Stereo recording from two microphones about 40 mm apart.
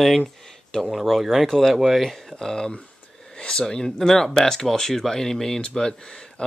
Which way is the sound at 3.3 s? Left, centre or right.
Left.